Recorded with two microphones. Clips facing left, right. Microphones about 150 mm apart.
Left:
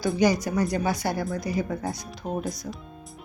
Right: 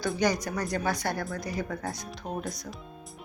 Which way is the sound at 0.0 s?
5° left (ahead or behind).